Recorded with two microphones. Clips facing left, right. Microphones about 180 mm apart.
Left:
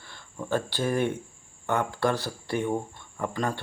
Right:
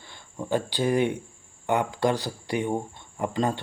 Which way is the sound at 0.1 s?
15° right (ahead or behind).